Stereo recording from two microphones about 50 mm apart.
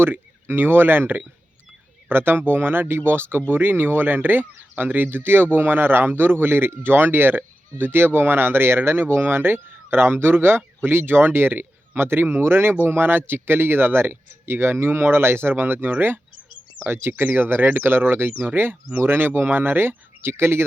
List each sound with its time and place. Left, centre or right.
0.0 s speech: right